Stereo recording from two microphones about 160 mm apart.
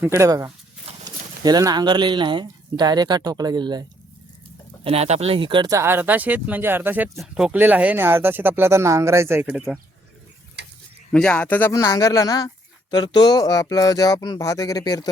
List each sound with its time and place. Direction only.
0.0 s speech: 20° right (ahead or behind)
4.8 s speech: 40° right (ahead or behind); by 9.7 s 5° right (ahead or behind)
10.6 s mechanisms: 90° right
11.1 s speech: 10° left (ahead or behind)
11.7 s speech: 20° left (ahead or behind)